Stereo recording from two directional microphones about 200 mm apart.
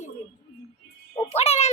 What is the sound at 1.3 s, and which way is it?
Speech, 30° left (ahead or behind).